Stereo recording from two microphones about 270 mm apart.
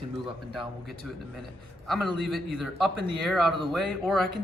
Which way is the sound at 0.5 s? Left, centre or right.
Centre.